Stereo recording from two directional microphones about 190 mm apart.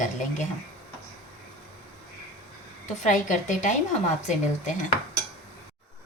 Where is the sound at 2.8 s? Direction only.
40° left (ahead or behind).